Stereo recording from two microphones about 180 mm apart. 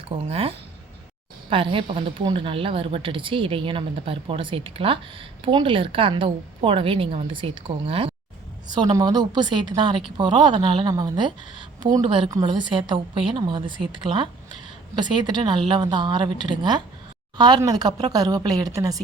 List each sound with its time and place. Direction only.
0.3 s a woman's voice: 35° right (ahead or behind)